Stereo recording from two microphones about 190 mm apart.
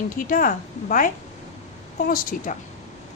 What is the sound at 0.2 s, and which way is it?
A woman's voice, 45° left (ahead or behind).